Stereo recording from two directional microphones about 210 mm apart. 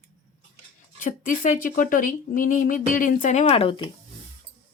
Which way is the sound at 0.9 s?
40° left (ahead or behind).